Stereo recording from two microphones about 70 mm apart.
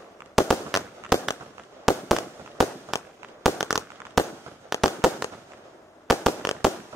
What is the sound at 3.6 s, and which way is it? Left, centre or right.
Fireworks, left.